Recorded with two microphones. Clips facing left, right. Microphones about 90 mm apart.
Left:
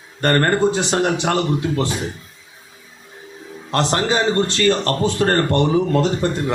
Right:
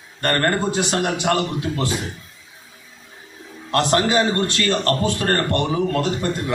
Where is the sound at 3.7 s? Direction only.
30° left (ahead or behind).